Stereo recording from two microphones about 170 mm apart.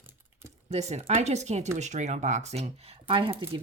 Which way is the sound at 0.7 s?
40° right (ahead or behind).